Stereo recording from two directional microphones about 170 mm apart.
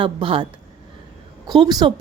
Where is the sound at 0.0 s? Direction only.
30° right (ahead or behind).